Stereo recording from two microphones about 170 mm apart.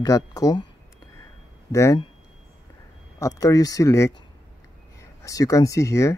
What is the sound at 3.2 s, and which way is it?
Speech, 20° left (ahead or behind).